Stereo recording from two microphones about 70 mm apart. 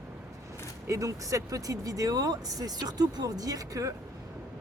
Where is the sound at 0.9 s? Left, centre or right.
Right.